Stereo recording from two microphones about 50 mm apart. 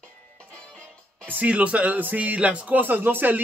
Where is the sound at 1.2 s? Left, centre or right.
Right.